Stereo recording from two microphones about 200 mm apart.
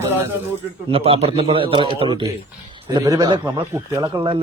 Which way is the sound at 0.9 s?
30° right (ahead or behind).